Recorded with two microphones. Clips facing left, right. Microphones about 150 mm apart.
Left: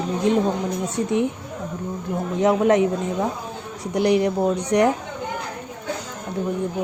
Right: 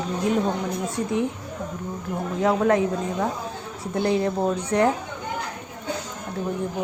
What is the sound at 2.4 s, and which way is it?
Speech, 20° left (ahead or behind).